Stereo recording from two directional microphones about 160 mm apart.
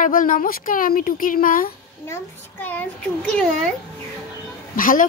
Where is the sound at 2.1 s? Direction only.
10° left (ahead or behind).